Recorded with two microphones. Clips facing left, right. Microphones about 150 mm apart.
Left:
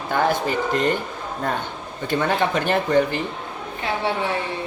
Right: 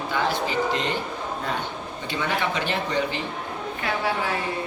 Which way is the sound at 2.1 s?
50° left (ahead or behind).